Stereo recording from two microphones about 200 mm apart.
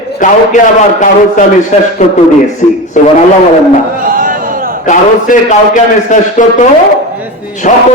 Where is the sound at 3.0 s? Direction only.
40° left (ahead or behind).